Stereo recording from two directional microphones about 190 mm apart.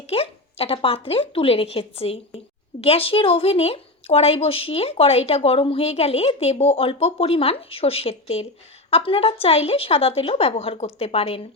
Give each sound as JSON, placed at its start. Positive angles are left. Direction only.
{"t": 0.1, "sound": "a woman's voice", "side_deg": 30}